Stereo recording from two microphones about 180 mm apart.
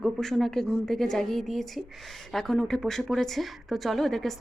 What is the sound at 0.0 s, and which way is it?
A woman's voice, centre (ahead or behind).